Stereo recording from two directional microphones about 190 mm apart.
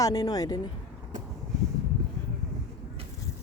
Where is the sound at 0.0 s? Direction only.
20° left (ahead or behind).